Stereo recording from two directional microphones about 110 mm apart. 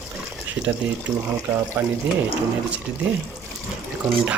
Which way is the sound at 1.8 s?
20° right (ahead or behind).